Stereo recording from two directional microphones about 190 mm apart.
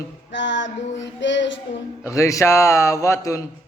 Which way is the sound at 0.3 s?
70° left (ahead or behind).